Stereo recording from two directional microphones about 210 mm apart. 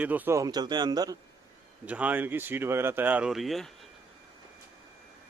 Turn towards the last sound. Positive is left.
turn(degrees=0)  # may be behind; listen again after turning